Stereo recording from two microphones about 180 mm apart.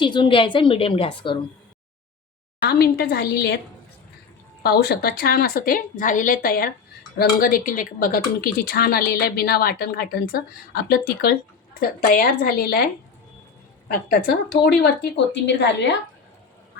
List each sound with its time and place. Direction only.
0.0 s a woman's voice: 25° left (ahead or behind)
2.6 s speech: 60° left (ahead or behind)
4.6 s speech: 60° left (ahead or behind)